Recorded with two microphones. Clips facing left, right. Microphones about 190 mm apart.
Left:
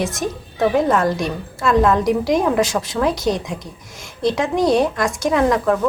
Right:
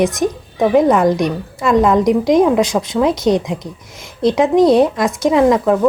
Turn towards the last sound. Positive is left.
turn(degrees=-15)  # may be behind; listen again after turning